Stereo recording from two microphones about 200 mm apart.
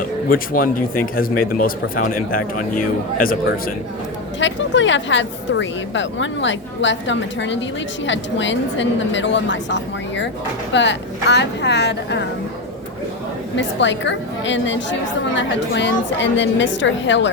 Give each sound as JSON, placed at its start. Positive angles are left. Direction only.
{"t": 0.3, "sound": "speech", "side_deg": 45}
{"t": 4.4, "sound": "a woman's voice", "side_deg": 65}
{"t": 13.6, "sound": "a woman's voice", "side_deg": 65}